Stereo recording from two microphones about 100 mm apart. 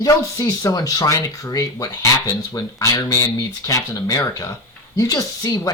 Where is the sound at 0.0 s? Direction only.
35° left (ahead or behind).